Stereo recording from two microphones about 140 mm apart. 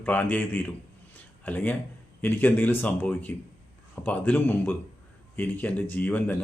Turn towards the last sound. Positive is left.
turn(degrees=10)  # may be behind; listen again after turning